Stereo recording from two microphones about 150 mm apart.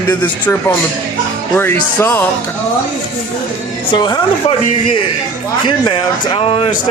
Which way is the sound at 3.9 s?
30° left (ahead or behind).